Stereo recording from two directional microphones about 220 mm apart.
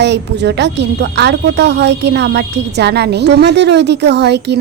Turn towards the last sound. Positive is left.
turn(degrees=-50)  # may be behind; listen again after turning